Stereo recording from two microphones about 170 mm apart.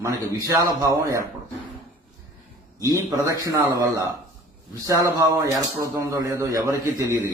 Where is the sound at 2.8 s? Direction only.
20° right (ahead or behind).